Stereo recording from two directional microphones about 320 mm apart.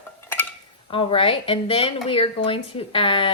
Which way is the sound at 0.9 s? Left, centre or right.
Centre.